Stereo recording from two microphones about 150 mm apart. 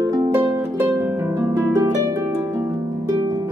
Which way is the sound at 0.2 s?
15° right (ahead or behind).